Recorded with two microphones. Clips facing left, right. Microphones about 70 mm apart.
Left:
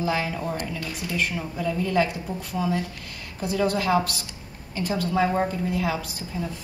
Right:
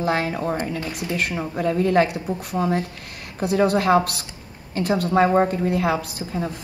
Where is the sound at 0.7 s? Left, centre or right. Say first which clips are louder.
Right 5 dB; right.